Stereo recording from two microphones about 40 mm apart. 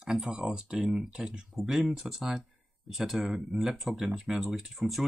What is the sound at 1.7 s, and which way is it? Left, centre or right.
Speech, centre.